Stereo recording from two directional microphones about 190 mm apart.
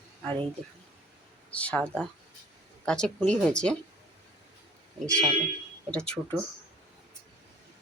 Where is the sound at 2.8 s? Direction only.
5° left (ahead or behind).